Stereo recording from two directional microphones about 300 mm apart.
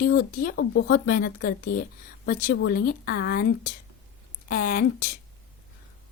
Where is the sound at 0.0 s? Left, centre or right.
Left.